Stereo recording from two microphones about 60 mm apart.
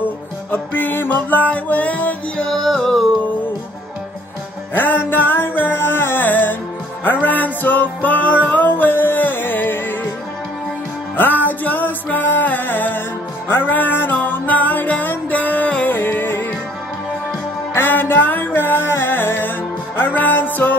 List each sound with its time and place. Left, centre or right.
0.5 s music: left
2.5 s music: centre
4.7 s music: left
11.1 s music: left
17.7 s music: left